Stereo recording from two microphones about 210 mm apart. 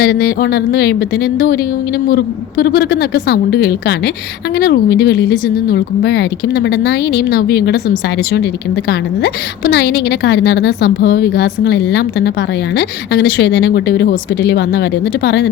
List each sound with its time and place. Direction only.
0.0 s speech: 45° left (ahead or behind)